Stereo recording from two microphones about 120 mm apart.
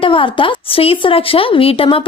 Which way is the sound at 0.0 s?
45° left (ahead or behind).